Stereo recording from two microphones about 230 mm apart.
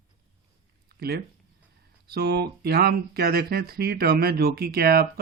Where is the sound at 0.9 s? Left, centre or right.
Right.